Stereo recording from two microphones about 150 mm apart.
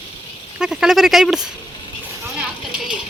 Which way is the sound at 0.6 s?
5° right (ahead or behind).